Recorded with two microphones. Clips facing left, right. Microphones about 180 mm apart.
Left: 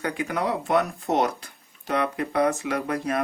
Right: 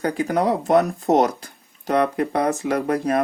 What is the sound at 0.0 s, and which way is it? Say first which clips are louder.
Speech: right 6 dB; 35° right (ahead or behind).